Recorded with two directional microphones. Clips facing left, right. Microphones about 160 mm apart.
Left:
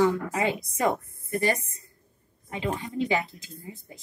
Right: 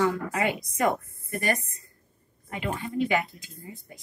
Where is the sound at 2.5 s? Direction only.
25° left (ahead or behind).